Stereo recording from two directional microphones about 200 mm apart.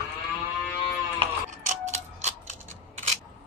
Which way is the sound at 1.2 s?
35° right (ahead or behind).